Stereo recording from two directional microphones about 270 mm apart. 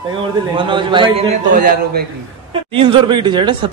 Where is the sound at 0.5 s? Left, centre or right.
Centre.